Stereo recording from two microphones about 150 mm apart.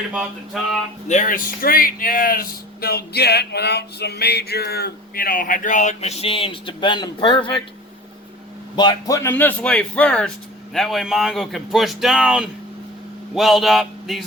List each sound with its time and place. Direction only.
0.1 s speech: 5° right (ahead or behind)
1.0 s speech: 60° left (ahead or behind); by 7.5 s 35° left (ahead or behind)
8.7 s speech: 30° left (ahead or behind); by 14.3 s centre (ahead or behind)